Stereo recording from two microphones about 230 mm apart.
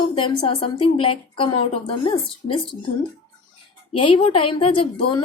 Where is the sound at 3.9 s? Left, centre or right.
Left.